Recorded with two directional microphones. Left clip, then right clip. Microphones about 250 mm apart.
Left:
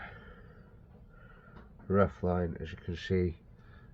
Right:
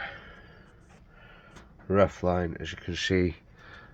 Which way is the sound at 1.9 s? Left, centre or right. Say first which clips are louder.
Right 5 dB; right.